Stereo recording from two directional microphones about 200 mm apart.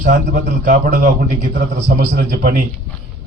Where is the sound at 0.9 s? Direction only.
40° right (ahead or behind).